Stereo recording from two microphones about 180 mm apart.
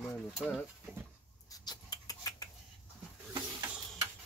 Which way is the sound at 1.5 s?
20° left (ahead or behind).